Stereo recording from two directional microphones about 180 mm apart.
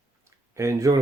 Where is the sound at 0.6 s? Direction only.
15° right (ahead or behind).